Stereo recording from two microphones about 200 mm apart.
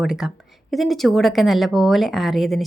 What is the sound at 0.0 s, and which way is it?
Speech, centre (ahead or behind).